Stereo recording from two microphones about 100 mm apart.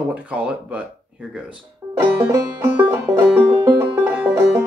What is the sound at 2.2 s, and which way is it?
Banjo, 25° right (ahead or behind).